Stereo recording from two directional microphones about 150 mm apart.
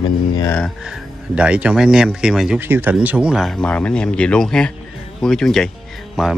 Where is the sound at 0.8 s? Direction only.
5° right (ahead or behind).